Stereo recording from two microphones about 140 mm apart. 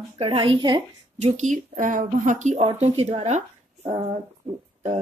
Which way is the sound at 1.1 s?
60° right (ahead or behind).